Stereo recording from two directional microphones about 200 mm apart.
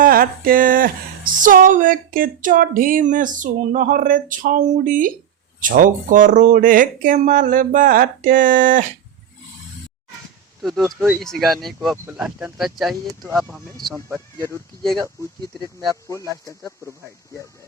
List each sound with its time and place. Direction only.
0.0 s speech: 45° right (ahead or behind)
10.6 s speech: centre (ahead or behind)